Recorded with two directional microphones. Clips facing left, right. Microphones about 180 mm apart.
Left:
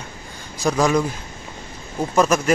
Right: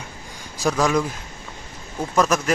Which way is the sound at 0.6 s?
Centre (ahead or behind).